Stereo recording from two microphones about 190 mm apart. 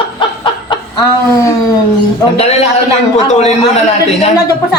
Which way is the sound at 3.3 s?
35° left (ahead or behind).